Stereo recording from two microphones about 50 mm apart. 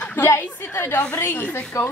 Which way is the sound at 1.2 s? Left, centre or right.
Left.